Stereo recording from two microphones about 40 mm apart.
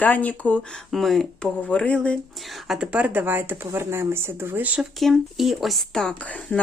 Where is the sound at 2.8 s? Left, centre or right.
Right.